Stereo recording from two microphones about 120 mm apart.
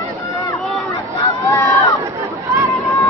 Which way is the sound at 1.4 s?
25° left (ahead or behind).